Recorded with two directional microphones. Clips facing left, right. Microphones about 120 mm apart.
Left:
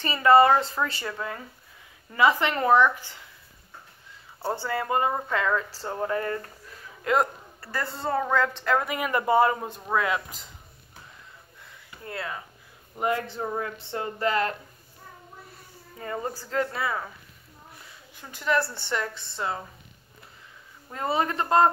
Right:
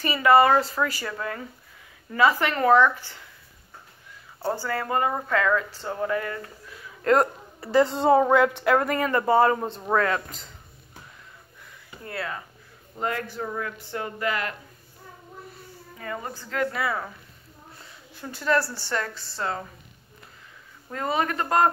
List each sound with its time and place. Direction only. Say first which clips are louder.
0.0 s speech: even; 25° left (ahead or behind)
2.1 s speech: right 1 dB; 20° left (ahead or behind)
4.6 s speech: left 1 dB; 20° left (ahead or behind)
6.0 s speech: even; 35° left (ahead or behind)
7.6 s a woman's voice: right 11 dB; 20° right (ahead or behind)
8.7 s a woman's voice: right 3 dB; 10° left (ahead or behind)
12.1 s speech: right 2 dB; 20° left (ahead or behind)
16.0 s speech: left 2 dB; 30° left (ahead or behind)
18.3 s a woman's voice: right 2 dB; 15° left (ahead or behind)
20.9 s speech: even; 20° left (ahead or behind)